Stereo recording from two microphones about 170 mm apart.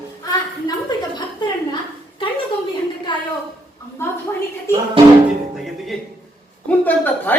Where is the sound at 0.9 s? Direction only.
25° left (ahead or behind).